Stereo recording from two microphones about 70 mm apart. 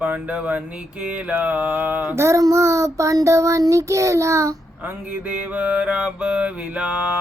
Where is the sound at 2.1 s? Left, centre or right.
Right.